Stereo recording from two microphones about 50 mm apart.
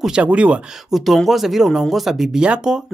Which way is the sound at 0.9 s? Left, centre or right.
Centre.